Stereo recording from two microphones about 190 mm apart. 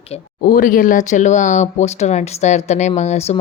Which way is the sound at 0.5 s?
45° left (ahead or behind).